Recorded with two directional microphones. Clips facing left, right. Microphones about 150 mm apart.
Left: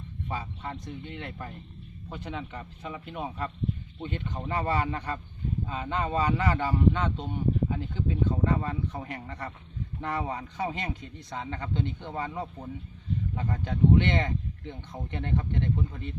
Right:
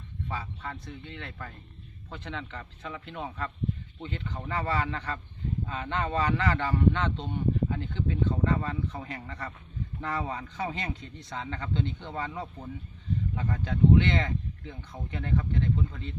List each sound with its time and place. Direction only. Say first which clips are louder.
0.3 s speech: left 2 dB; 20° left (ahead or behind)